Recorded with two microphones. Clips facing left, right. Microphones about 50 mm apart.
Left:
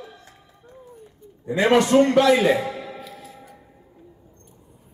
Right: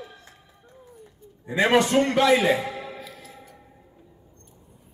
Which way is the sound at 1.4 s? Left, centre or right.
Right.